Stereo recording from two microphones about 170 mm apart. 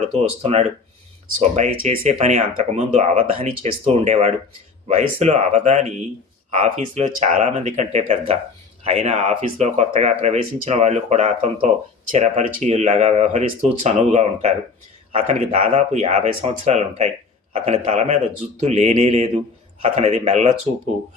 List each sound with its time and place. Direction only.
0.2 s speech: 40° right (ahead or behind)